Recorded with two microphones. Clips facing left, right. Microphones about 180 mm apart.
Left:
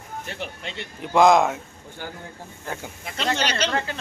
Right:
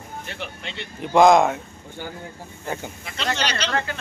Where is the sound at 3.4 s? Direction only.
50° left (ahead or behind).